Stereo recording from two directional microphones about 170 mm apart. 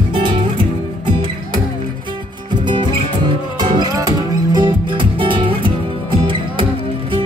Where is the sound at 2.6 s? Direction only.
30° right (ahead or behind).